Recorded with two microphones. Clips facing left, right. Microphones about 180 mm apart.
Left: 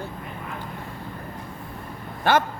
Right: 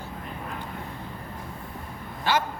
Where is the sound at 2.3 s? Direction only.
55° left (ahead or behind).